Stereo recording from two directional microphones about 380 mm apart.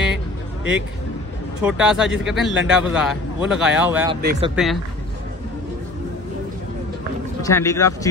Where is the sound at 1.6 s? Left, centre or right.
Centre.